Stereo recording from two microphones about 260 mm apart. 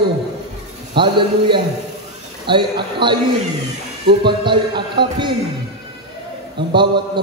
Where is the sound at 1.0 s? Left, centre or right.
Centre.